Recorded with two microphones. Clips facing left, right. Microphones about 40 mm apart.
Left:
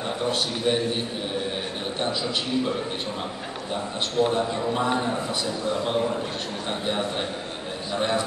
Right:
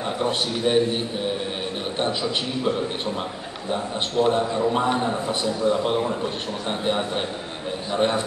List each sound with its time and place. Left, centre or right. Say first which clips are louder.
0.2 s a man's voice: right 2 dB; right
4.2 s a man's voice: right 3 dB; right
7.9 s a man's voice: right 3 dB; right